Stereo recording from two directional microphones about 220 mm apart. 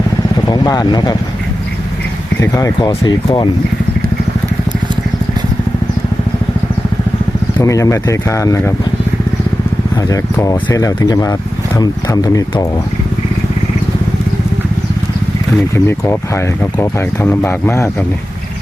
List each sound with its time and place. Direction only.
0.4 s speech: 20° left (ahead or behind)
2.4 s speech: 15° left (ahead or behind)
7.6 s speech: 15° left (ahead or behind)
10.1 s speech: 15° left (ahead or behind)
15.7 s speech: 10° left (ahead or behind)